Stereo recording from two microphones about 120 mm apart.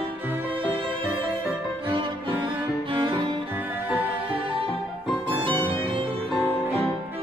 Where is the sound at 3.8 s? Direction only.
15° right (ahead or behind).